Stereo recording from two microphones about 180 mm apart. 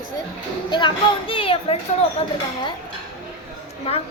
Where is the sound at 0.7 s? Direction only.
25° left (ahead or behind).